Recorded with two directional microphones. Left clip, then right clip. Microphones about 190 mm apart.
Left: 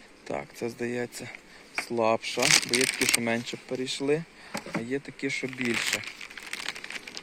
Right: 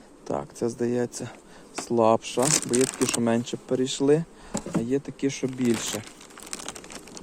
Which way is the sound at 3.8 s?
15° right (ahead or behind).